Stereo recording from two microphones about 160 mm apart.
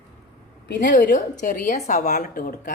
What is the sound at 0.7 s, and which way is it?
Speech, 90° left.